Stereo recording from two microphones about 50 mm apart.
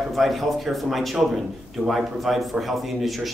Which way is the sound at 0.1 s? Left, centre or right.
Centre.